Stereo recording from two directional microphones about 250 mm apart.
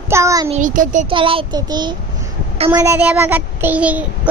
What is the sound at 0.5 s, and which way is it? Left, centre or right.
Speech, right.